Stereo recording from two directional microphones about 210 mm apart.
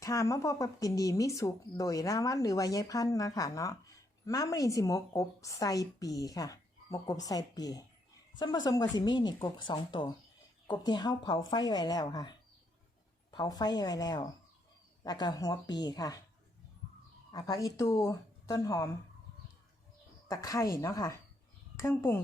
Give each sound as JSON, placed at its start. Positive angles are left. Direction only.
{"t": 0.0, "sound": "a woman's voice", "side_deg": 15}
{"t": 17.3, "sound": "speech", "side_deg": 15}
{"t": 20.2, "sound": "speech", "side_deg": 15}